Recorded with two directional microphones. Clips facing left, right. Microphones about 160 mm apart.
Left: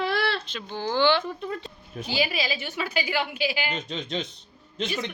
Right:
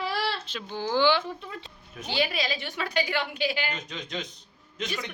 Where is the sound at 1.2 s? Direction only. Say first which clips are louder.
Left 5 dB; 45° left (ahead or behind).